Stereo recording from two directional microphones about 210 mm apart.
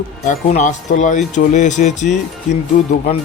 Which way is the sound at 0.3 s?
35° left (ahead or behind).